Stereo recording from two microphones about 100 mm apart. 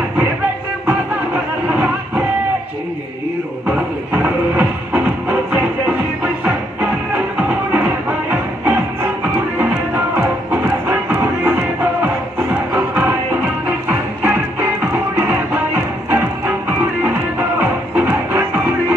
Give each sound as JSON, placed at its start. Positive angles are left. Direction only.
{"t": 0.8, "sound": "music", "side_deg": -15}
{"t": 3.6, "sound": "music", "side_deg": -15}
{"t": 7.3, "sound": "music", "side_deg": -15}